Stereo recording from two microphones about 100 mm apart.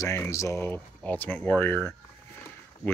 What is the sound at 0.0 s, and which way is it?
Speech, 30° left (ahead or behind).